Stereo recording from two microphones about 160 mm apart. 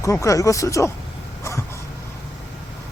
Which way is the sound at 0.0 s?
20° left (ahead or behind).